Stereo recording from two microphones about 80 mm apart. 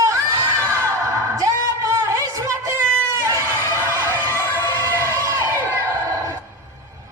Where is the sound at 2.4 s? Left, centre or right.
Right.